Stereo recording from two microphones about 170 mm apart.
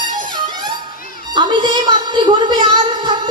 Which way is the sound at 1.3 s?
25° right (ahead or behind).